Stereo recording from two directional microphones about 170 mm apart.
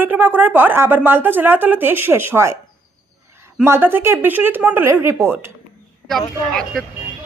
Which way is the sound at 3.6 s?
15° right (ahead or behind).